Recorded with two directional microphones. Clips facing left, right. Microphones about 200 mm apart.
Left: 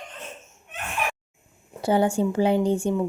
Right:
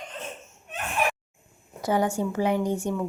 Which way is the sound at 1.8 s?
30° left (ahead or behind).